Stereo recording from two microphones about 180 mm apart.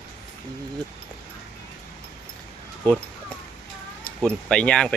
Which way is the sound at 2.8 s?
5° left (ahead or behind).